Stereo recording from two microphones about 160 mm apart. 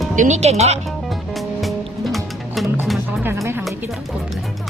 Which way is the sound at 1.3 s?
Centre (ahead or behind).